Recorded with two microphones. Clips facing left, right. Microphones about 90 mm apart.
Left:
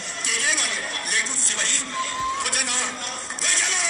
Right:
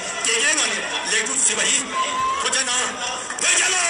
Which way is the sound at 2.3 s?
45° right (ahead or behind).